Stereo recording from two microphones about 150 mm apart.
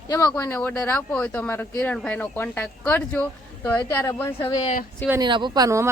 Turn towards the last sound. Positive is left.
turn(degrees=-20)  # may be behind; listen again after turning